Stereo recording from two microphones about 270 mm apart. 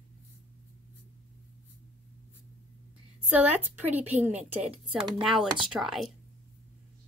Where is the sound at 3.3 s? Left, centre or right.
Centre.